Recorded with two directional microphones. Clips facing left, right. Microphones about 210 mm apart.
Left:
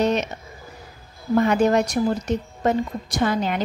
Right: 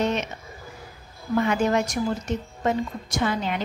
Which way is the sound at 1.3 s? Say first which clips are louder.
Left 4 dB; 40° left (ahead or behind).